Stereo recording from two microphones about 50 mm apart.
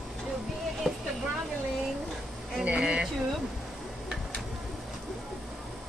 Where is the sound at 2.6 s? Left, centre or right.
Right.